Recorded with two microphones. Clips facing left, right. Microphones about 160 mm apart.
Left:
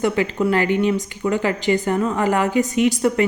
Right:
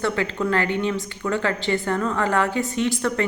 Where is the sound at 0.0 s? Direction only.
15° left (ahead or behind).